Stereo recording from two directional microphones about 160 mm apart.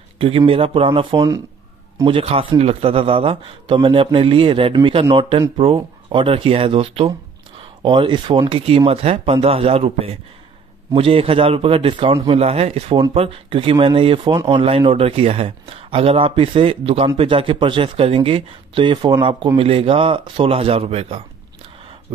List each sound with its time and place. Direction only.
0.2 s a man's voice: 35° right (ahead or behind)